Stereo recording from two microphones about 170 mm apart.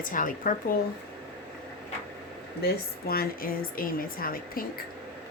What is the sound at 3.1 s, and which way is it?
Speech, 60° left (ahead or behind).